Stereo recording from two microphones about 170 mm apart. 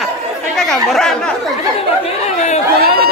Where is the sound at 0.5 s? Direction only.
5° left (ahead or behind).